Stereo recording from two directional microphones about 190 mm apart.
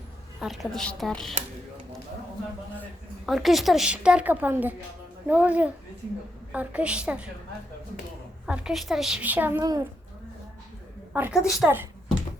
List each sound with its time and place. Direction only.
0.3 s a woman's voice: centre (ahead or behind)
3.2 s a woman's voice: centre (ahead or behind)
8.4 s a woman's voice: 5° right (ahead or behind)
11.1 s a woman's voice: 5° right (ahead or behind)